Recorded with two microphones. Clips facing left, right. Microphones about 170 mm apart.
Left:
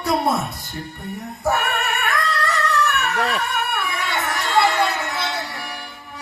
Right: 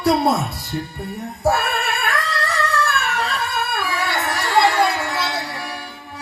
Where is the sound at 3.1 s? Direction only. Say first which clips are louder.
Left 2 dB; 60° left (ahead or behind).